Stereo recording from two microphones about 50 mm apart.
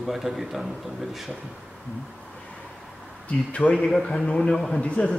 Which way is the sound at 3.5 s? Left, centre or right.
Left.